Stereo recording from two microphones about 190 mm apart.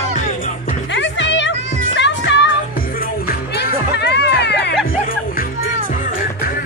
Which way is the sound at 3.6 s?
60° left (ahead or behind).